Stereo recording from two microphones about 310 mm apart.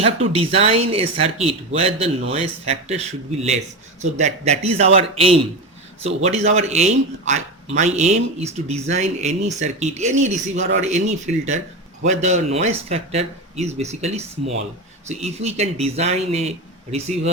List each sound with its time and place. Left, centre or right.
0.0 s speech: centre